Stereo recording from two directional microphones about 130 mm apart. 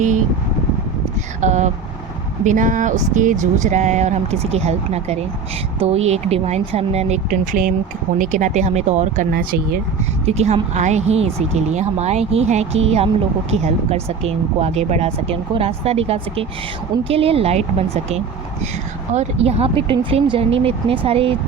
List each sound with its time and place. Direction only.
1.4 s speech: 65° right (ahead or behind)
2.4 s speech: 80° right; by 7.2 s 55° right (ahead or behind)
8.2 s speech: 70° right (ahead or behind)
10.2 s speech: 55° right (ahead or behind)